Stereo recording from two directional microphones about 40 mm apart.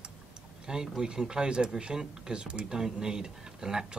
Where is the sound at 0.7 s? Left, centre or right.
Centre.